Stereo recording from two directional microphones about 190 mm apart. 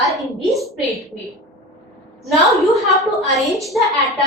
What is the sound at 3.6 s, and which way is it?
Speech, centre (ahead or behind).